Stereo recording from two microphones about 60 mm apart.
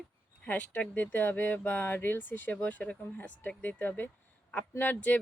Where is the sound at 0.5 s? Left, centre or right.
Left.